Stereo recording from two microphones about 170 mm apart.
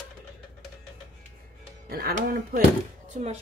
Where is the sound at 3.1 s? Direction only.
40° right (ahead or behind).